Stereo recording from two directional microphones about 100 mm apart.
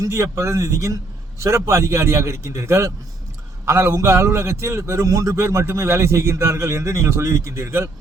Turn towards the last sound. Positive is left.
turn(degrees=-25)  # may be behind; listen again after turning